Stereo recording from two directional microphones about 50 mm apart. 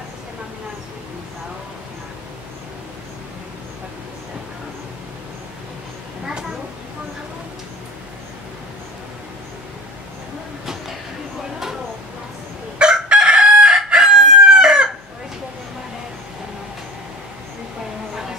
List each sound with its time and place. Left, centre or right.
12.7 s chicken: centre